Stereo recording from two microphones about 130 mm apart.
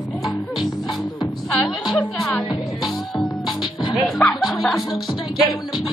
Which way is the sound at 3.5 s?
35° left (ahead or behind).